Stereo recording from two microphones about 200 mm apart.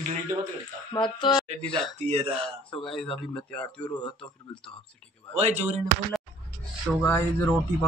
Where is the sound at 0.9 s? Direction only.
25° left (ahead or behind).